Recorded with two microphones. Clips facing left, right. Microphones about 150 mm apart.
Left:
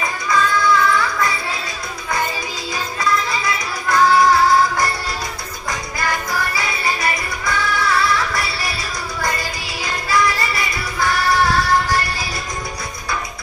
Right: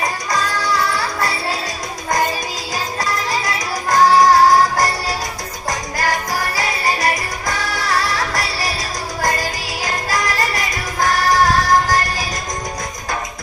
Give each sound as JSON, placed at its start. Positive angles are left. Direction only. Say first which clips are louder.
{"t": 0.0, "sound": "music", "louder": "left 1 dB", "side_deg": -40}
{"t": 3.0, "sound": "music", "louder": "left 3 dB", "side_deg": -40}